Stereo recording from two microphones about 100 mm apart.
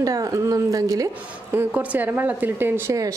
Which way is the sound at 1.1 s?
15° right (ahead or behind).